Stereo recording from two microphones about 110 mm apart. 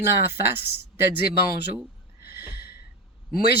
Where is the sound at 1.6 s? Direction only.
20° right (ahead or behind).